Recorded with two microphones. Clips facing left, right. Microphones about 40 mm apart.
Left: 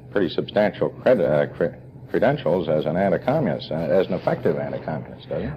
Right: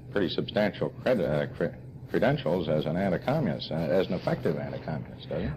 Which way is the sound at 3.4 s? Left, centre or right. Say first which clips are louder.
Left 6 dB; centre.